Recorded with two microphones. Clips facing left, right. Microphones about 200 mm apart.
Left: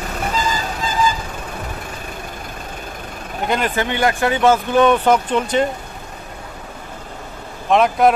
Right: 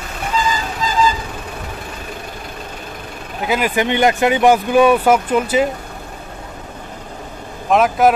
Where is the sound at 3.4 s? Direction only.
5° right (ahead or behind).